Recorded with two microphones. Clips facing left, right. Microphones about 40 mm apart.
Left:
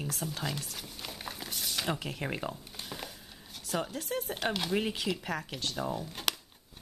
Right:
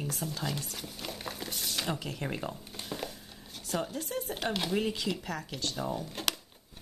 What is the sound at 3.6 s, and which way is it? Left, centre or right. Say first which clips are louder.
Speech: even; centre.